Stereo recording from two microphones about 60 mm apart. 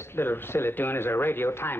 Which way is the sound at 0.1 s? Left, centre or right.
Left.